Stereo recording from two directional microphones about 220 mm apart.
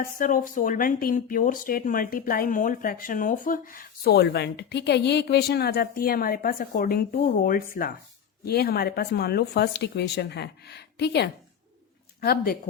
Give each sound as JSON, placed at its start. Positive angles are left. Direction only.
{"t": 0.0, "sound": "speech", "side_deg": 40}